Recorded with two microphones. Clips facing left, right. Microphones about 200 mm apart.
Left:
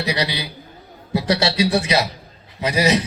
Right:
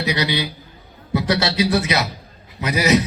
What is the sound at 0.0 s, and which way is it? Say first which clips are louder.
A man's voice: right 2 dB; 30° left (ahead or behind).